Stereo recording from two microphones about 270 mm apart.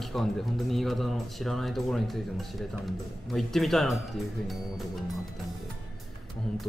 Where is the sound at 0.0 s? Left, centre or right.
Centre.